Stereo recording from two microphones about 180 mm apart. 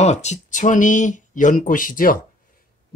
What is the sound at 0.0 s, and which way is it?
Speech, 40° left (ahead or behind).